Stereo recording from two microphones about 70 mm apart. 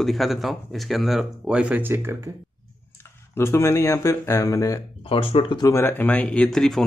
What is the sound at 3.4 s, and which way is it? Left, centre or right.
Speech, left.